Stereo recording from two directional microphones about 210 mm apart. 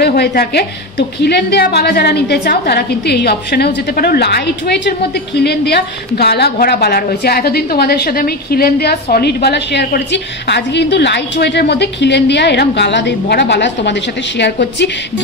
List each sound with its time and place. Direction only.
0.0 s a woman's voice: 50° left (ahead or behind)